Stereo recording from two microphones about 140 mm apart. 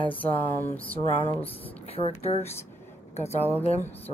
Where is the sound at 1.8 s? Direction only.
45° left (ahead or behind).